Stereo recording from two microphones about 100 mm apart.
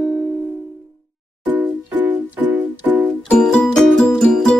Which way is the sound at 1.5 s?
20° right (ahead or behind).